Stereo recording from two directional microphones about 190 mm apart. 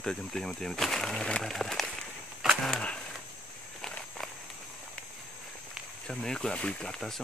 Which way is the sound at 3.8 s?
5° left (ahead or behind).